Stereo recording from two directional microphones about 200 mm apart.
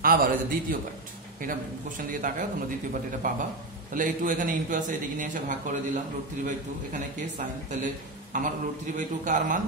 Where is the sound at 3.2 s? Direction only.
40° right (ahead or behind).